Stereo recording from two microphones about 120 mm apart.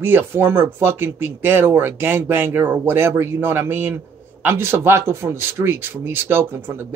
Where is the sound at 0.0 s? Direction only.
20° right (ahead or behind).